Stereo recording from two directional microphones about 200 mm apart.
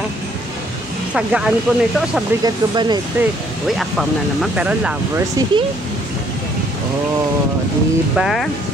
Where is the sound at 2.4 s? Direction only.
20° right (ahead or behind).